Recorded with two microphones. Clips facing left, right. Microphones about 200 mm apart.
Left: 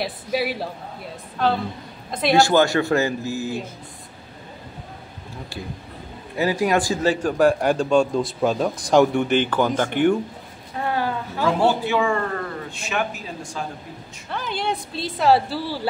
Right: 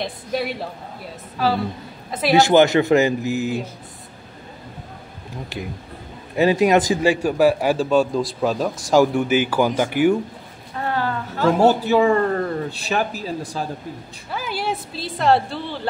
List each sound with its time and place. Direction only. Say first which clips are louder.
0.0 s a woman's voice: left 1 dB; 5° left (ahead or behind)
2.3 s speech: right 3 dB; 20° right (ahead or behind)
6.3 s a man's voice: right 5 dB; 20° right (ahead or behind); by 10.1 s 5° right (ahead or behind)
10.9 s a sound: right 1 dB; 10° left (ahead or behind)
11.4 s a man's voice: right 4 dB; 40° right (ahead or behind)
14.3 s a woman's voice: right 1 dB; 5° right (ahead or behind)